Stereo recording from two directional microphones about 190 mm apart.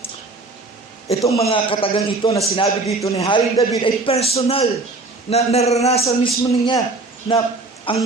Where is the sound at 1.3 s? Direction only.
30° left (ahead or behind).